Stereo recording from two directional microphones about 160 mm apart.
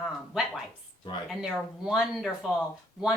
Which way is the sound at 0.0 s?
Centre (ahead or behind).